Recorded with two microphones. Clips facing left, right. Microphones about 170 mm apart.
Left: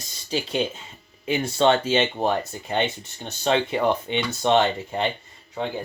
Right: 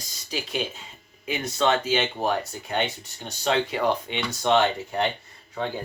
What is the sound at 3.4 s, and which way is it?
Speech, 25° left (ahead or behind).